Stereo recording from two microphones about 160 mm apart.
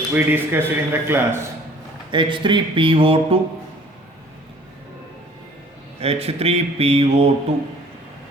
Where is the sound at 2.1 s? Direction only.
30° right (ahead or behind).